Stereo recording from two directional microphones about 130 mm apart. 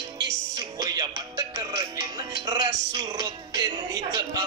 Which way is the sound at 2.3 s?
35° right (ahead or behind).